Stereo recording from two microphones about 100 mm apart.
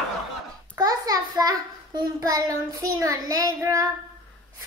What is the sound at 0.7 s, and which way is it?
A child's voice, 40° right (ahead or behind).